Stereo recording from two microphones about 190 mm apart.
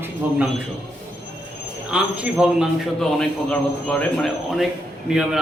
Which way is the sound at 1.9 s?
5° right (ahead or behind).